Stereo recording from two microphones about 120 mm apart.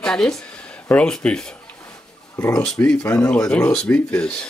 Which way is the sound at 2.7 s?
5° left (ahead or behind).